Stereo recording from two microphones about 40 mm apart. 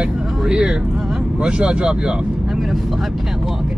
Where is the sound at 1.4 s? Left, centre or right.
Right.